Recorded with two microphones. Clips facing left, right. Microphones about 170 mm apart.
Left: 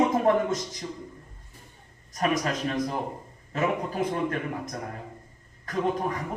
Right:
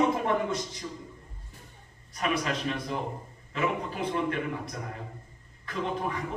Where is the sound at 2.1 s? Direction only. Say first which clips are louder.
Left 3 dB; 45° left (ahead or behind).